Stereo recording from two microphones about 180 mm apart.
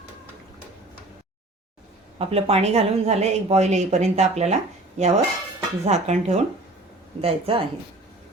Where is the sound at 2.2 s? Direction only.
35° right (ahead or behind).